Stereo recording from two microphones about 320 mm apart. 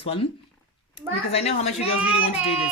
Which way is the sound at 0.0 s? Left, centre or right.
Centre.